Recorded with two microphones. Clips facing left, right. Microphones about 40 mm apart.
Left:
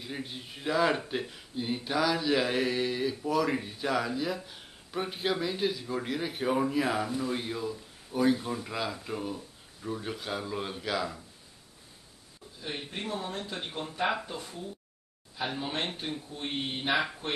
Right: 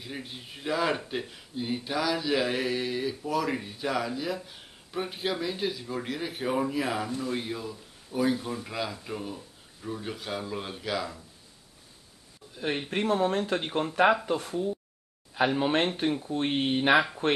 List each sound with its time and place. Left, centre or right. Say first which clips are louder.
0.0 s speech: left 1 dB; centre
12.5 s speech: right 8 dB; right